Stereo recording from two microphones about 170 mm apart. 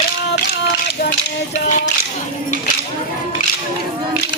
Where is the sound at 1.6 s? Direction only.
45° left (ahead or behind).